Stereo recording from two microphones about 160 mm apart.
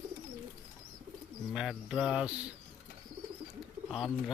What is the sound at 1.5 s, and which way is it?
Speech, 5° right (ahead or behind).